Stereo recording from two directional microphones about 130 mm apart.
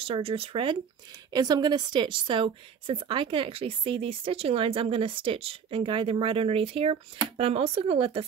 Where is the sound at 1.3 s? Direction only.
30° right (ahead or behind).